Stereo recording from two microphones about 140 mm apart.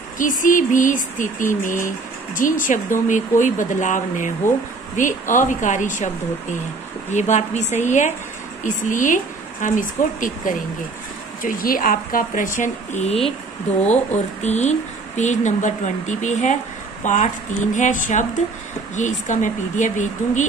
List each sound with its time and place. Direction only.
0.2 s speech: 70° left (ahead or behind)
7.1 s speech: 55° left (ahead or behind)
11.4 s speech: 85° left; by 13.3 s 50° left (ahead or behind)
14.4 s speech: 55° left (ahead or behind)